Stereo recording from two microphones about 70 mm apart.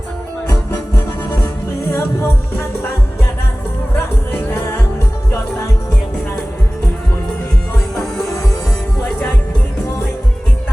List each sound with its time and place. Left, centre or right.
1.9 s music: left
3.9 s music: left